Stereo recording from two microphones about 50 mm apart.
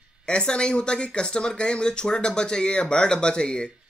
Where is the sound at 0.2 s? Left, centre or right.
Centre.